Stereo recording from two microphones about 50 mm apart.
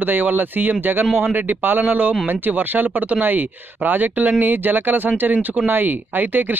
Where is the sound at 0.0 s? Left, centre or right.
Right.